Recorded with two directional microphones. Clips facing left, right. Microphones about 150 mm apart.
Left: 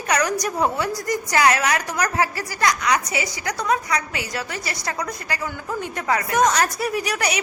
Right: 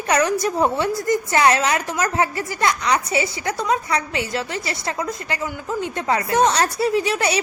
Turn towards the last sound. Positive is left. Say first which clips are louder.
# right 4 dB
turn(degrees=-25)  # may be behind; listen again after turning